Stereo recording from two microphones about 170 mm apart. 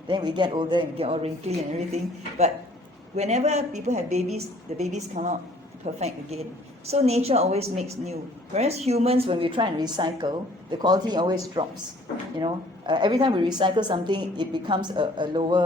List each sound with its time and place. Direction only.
0.1 s a woman's voice: 25° right (ahead or behind)
3.2 s a woman's voice: 40° right (ahead or behind); by 15.6 s 25° right (ahead or behind)